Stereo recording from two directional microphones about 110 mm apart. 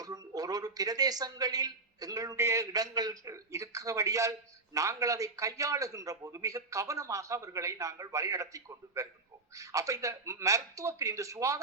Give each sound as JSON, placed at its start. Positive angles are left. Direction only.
{"t": 0.0, "sound": "speech", "side_deg": -35}